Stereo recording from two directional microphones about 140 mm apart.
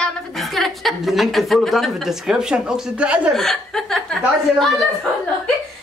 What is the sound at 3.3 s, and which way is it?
Speech, centre (ahead or behind).